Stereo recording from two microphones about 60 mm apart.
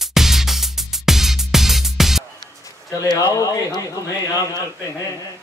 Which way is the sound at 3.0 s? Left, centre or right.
Left.